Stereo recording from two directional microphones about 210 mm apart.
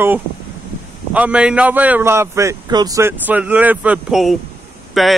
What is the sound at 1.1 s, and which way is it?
A man's voice, 5° right (ahead or behind).